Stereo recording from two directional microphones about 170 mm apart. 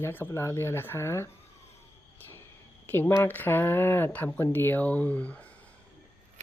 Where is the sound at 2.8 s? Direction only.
10° left (ahead or behind).